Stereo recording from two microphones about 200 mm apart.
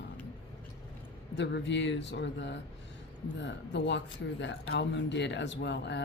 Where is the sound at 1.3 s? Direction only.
60° left (ahead or behind).